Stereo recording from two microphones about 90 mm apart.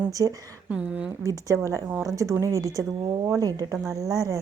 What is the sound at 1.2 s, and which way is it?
A woman's voice, 40° right (ahead or behind).